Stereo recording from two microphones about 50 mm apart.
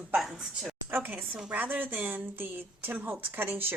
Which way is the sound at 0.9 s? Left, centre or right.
Right.